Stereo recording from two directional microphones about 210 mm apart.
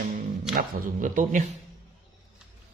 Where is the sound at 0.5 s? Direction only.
40° right (ahead or behind).